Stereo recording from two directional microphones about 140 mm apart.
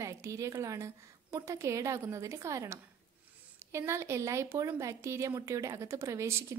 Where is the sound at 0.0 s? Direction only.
20° right (ahead or behind).